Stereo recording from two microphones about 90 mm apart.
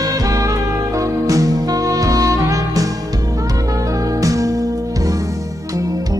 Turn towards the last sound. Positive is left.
turn(degrees=-40)  # may be behind; listen again after turning